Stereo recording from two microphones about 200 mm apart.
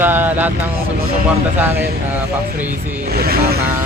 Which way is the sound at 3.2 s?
50° right (ahead or behind).